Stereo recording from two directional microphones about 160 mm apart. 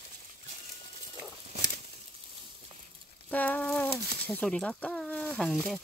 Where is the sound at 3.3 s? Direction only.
10° left (ahead or behind).